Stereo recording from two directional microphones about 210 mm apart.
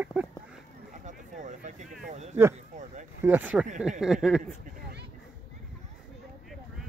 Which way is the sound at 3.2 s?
10° right (ahead or behind).